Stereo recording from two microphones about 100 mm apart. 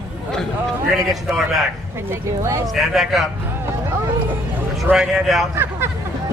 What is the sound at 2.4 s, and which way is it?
Speech, 30° right (ahead or behind).